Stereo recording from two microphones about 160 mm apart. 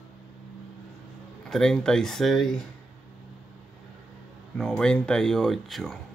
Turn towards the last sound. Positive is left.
turn(degrees=0)  # may be behind; listen again after turning